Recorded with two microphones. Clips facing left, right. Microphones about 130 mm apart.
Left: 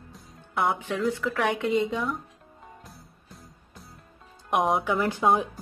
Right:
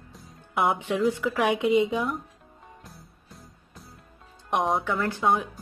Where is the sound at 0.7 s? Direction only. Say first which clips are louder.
Right 3 dB; 20° right (ahead or behind).